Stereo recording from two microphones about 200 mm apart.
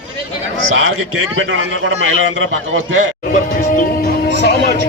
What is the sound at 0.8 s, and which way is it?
A man's voice, 80° right.